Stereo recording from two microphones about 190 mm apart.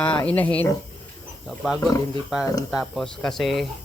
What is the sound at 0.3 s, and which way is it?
Speech, 10° left (ahead or behind).